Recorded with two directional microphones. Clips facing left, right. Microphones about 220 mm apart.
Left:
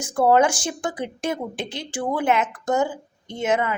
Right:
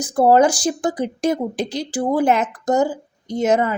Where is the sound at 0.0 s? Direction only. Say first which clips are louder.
Right 4 dB; 35° right (ahead or behind).